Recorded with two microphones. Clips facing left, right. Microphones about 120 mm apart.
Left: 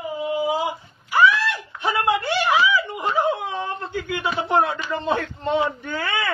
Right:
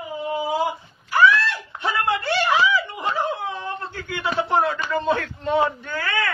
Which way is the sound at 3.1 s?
20° left (ahead or behind).